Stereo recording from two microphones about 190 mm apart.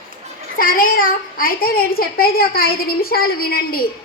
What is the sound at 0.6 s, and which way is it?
A child's voice, 50° left (ahead or behind).